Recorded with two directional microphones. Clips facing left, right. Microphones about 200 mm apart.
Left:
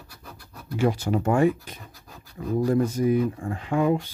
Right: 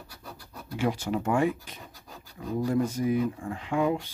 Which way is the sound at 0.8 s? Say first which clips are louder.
Left 4 dB; 40° left (ahead or behind).